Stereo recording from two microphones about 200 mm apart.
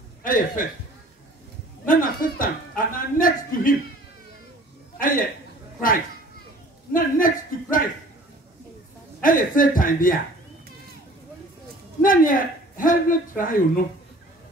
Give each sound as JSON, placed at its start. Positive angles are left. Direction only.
{"t": 0.2, "sound": "speech", "side_deg": 45}
{"t": 1.9, "sound": "speech", "side_deg": 45}
{"t": 4.9, "sound": "a man's voice", "side_deg": 45}
{"t": 6.9, "sound": "speech", "side_deg": 45}
{"t": 9.2, "sound": "speech", "side_deg": 45}
{"t": 12.0, "sound": "speech", "side_deg": 45}